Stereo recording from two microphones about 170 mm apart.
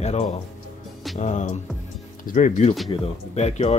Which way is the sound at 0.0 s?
40° left (ahead or behind).